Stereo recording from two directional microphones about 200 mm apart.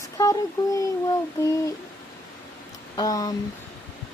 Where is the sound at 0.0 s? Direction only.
15° left (ahead or behind).